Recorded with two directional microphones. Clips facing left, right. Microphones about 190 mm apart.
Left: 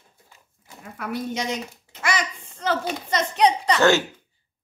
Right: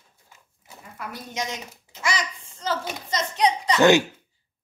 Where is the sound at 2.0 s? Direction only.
60° left (ahead or behind).